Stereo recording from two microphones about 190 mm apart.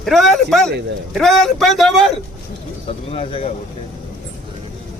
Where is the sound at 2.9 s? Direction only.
30° left (ahead or behind).